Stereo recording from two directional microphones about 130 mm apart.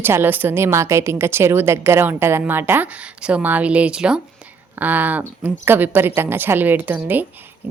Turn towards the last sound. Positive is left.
turn(degrees=-15)  # may be behind; listen again after turning